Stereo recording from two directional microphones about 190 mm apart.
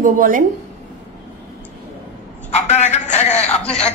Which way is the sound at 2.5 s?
35° left (ahead or behind).